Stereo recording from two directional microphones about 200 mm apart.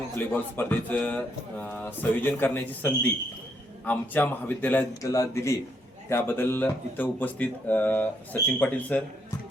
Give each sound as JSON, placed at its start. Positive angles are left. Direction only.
{"t": 0.2, "sound": "speech", "side_deg": 10}